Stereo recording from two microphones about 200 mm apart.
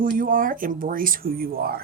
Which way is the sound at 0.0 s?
45° right (ahead or behind).